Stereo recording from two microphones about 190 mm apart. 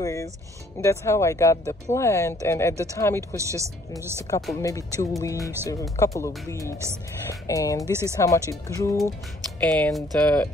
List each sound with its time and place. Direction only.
0.0 s speech: 15° left (ahead or behind)
3.3 s speech: 15° right (ahead or behind)
4.6 s speech: 15° left (ahead or behind)
9.6 s speech: 5° left (ahead or behind)